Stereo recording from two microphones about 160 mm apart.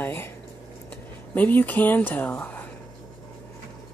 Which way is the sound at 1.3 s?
10° left (ahead or behind).